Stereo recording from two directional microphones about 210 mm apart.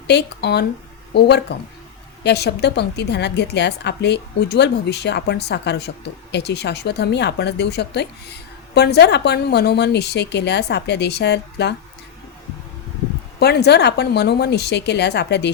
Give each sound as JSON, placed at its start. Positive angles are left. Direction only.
{"t": 0.1, "sound": "speech", "side_deg": 50}
{"t": 13.4, "sound": "speech", "side_deg": 50}